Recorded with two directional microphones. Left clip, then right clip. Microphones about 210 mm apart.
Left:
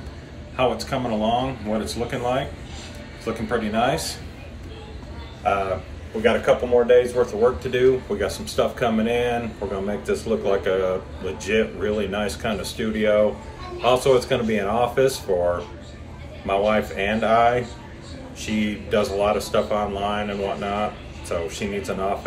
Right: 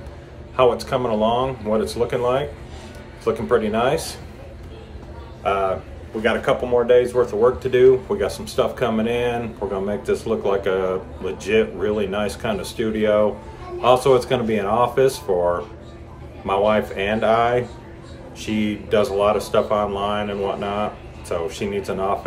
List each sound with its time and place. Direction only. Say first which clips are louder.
0.6 s speech: right 5 dB; 15° right (ahead or behind)
6.5 s speech: even; 15° right (ahead or behind)